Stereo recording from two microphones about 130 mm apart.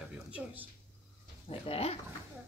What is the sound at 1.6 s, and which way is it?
Speech, 50° left (ahead or behind).